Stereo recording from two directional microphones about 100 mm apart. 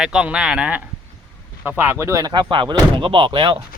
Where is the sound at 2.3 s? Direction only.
55° right (ahead or behind).